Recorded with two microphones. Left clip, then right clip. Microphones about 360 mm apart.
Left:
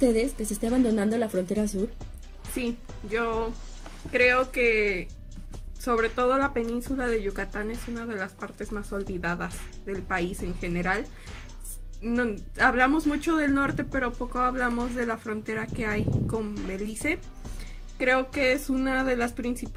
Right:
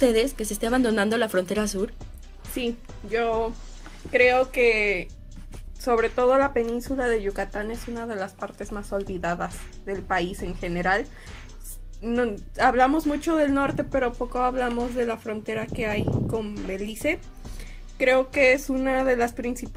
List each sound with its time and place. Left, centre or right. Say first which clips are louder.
0.9 s speech: right 4 dB; right
2.5 s a woman's voice: right 3 dB; centre